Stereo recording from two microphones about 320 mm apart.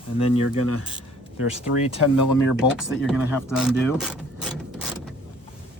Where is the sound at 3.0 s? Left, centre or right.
Centre.